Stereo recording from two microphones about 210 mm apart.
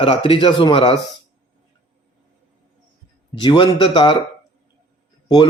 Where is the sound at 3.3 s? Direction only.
25° left (ahead or behind).